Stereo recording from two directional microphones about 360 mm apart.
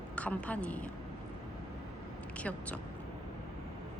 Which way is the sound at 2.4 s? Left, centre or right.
Centre.